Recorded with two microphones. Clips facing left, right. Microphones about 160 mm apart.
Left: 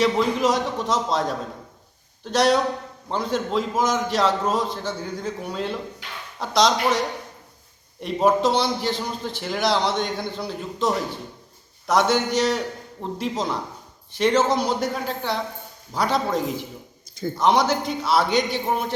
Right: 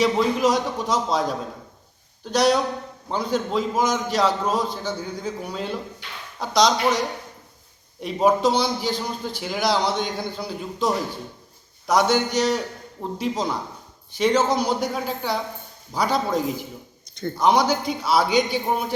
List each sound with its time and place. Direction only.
0.0 s a man's voice: centre (ahead or behind)
8.0 s a man's voice: centre (ahead or behind)